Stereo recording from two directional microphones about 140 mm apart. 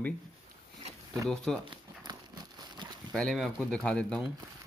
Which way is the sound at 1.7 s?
30° right (ahead or behind).